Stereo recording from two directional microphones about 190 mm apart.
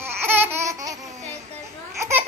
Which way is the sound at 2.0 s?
15° right (ahead or behind).